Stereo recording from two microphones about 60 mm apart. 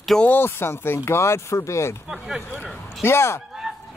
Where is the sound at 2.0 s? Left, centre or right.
Centre.